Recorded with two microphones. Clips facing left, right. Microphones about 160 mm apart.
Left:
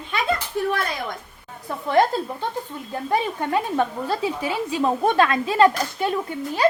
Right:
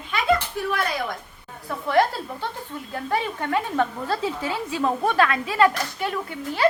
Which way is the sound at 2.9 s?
20° left (ahead or behind).